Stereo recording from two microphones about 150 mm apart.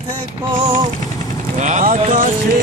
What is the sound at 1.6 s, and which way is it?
Vehicle, 60° right (ahead or behind).